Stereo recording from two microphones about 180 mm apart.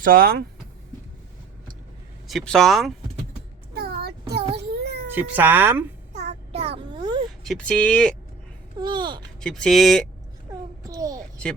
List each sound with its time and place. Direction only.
0.0 s speech: 50° right (ahead or behind)
2.2 s speech: centre (ahead or behind)
3.8 s a sound: 60° right (ahead or behind)
5.1 s speech: 10° right (ahead or behind)
6.1 s child singing: 35° right (ahead or behind)
7.4 s speech: 5° left (ahead or behind)
8.8 s speech: 25° right (ahead or behind)
9.4 s speech: 5° left (ahead or behind)
10.8 s a sound: 20° right (ahead or behind)